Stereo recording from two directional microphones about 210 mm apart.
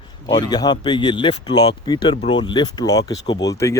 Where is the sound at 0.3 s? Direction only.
20° left (ahead or behind).